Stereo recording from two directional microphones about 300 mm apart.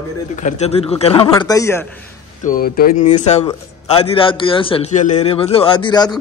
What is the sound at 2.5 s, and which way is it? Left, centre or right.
A man's voice, left.